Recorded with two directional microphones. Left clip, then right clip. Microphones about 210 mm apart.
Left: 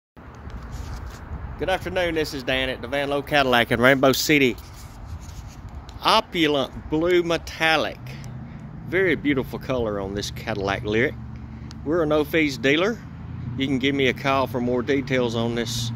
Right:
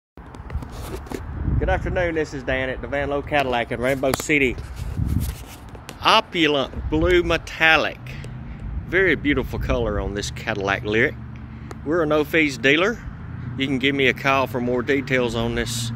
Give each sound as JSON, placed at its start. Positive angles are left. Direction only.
{"t": 1.6, "sound": "speech", "side_deg": 5}
{"t": 3.4, "sound": "speech", "side_deg": 50}
{"t": 6.0, "sound": "speech", "side_deg": 5}
{"t": 8.9, "sound": "speech", "side_deg": 5}